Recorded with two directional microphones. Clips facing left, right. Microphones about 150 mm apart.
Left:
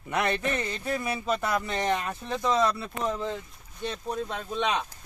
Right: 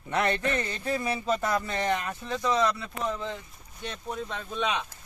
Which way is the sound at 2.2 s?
20° left (ahead or behind).